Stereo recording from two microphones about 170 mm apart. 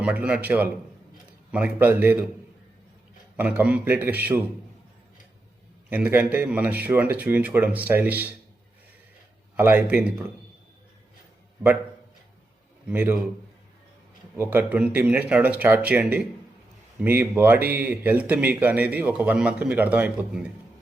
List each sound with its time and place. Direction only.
0.0 s speech: 5° right (ahead or behind)
3.3 s speech: 10° right (ahead or behind)
5.9 s speech: 10° right (ahead or behind)
9.6 s speech: 10° right (ahead or behind)
12.9 s speech: 10° right (ahead or behind)
14.3 s speech: 10° right (ahead or behind)